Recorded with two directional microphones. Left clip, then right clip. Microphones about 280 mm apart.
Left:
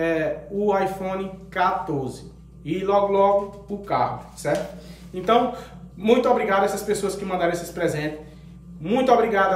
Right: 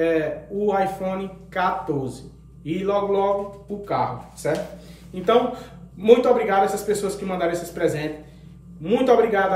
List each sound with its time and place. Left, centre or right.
0.0 s a man's voice: centre